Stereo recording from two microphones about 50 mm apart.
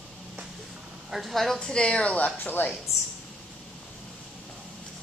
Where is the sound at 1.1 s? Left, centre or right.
Centre.